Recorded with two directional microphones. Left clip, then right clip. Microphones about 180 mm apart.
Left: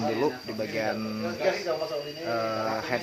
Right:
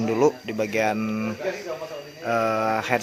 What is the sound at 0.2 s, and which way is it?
Speech, 55° right (ahead or behind).